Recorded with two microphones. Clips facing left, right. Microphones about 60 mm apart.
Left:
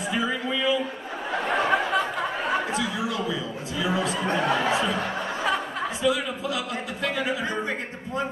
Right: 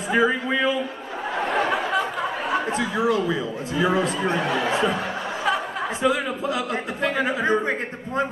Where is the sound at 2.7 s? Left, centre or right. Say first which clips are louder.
Right 5 dB; right.